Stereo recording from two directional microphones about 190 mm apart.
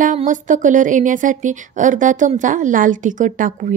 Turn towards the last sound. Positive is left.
turn(degrees=-45)  # may be behind; listen again after turning